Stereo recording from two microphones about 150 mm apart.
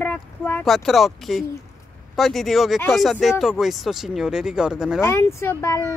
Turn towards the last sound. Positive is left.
turn(degrees=20)  # may be behind; listen again after turning